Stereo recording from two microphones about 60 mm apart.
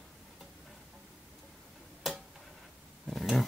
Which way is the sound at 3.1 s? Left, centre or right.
Centre.